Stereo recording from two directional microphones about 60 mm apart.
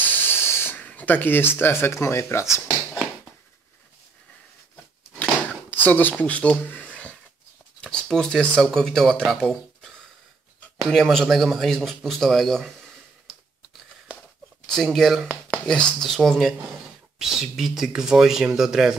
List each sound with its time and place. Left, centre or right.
0.0 s spray: left
0.8 s speech: left
5.7 s speech: left
7.8 s a sound: centre
8.7 s speech: centre
10.9 s speech: centre
14.8 s speech: centre